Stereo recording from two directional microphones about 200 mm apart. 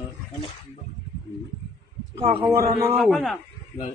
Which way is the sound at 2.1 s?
25° right (ahead or behind).